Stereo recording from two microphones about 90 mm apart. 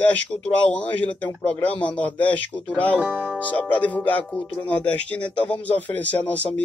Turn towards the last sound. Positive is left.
turn(degrees=15)  # may be behind; listen again after turning